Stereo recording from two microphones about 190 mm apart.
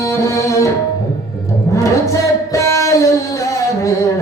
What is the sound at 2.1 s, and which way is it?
Singing, 15° left (ahead or behind).